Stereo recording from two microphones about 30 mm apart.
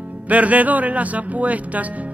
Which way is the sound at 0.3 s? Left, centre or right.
Right.